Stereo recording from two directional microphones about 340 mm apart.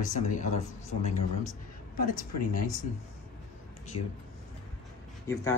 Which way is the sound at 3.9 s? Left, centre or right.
Left.